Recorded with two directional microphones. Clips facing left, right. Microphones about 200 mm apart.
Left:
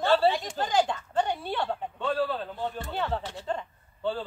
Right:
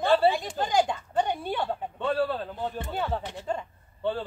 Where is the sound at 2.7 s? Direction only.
10° right (ahead or behind).